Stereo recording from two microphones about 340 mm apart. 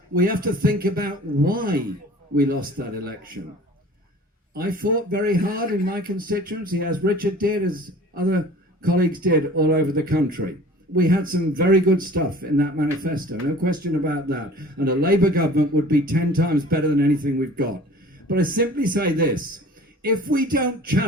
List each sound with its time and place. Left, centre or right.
0.1 s speech: right
4.5 s speech: right
18.3 s speech: right